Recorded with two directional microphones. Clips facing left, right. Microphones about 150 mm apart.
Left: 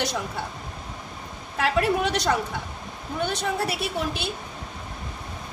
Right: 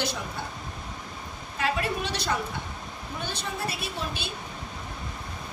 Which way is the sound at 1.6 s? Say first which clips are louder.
Left 6 dB; 70° left (ahead or behind).